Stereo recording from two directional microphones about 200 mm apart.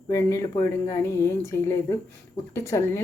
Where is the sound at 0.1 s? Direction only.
15° left (ahead or behind).